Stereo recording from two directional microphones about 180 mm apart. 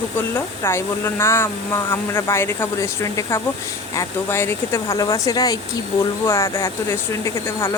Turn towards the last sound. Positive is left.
turn(degrees=15)  # may be behind; listen again after turning